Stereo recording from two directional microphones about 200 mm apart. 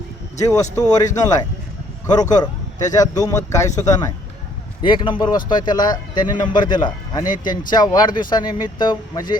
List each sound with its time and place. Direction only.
0.3 s a man's voice: 15° left (ahead or behind)